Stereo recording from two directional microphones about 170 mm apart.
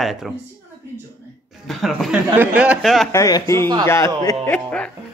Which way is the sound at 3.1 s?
20° left (ahead or behind).